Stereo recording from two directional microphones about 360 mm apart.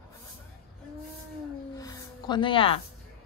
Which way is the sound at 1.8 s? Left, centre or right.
Centre.